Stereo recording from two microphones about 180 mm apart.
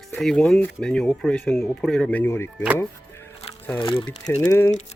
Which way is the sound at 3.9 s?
20° left (ahead or behind).